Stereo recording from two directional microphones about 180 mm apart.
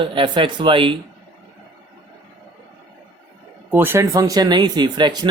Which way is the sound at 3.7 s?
15° right (ahead or behind).